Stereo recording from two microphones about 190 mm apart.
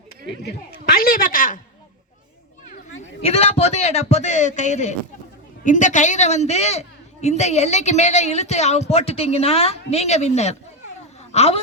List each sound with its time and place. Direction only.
0.9 s a woman's voice: 50° left (ahead or behind)
3.2 s a woman's voice: 30° left (ahead or behind)